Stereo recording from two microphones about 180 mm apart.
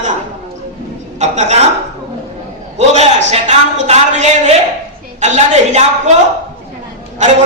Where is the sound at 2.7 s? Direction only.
40° right (ahead or behind).